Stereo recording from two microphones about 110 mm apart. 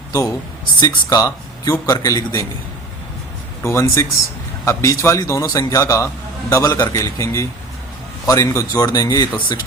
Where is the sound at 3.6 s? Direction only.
25° left (ahead or behind).